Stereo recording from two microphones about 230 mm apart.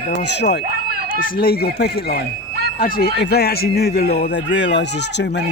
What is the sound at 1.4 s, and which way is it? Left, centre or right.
A man's voice, left.